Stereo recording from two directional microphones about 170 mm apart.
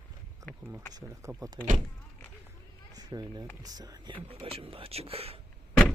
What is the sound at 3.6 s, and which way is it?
Speech, 20° right (ahead or behind).